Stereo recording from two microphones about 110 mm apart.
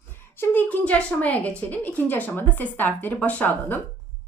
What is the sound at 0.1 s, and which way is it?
A woman's voice, 20° left (ahead or behind).